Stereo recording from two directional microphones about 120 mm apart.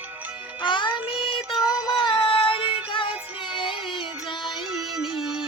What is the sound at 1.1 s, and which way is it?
Child singing, 45° left (ahead or behind).